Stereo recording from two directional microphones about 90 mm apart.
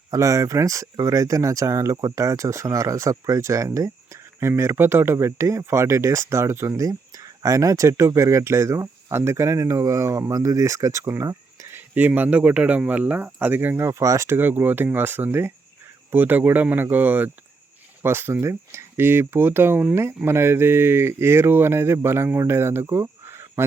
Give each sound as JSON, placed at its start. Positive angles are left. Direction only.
{"t": 0.1, "sound": "speech", "side_deg": -35}
{"t": 11.7, "sound": "speech", "side_deg": -20}